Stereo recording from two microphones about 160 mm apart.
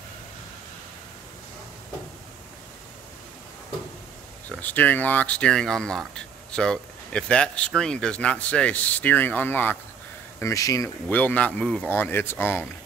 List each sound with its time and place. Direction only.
4.5 s speech: 10° left (ahead or behind)
11.1 s speech: 10° left (ahead or behind)